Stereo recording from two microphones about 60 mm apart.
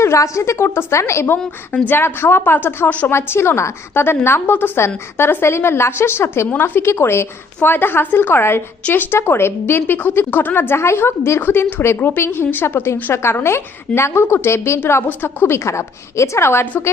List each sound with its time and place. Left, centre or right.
0.0 s a woman's voice: left
1.7 s a woman's voice: left
3.1 s a woman's voice: left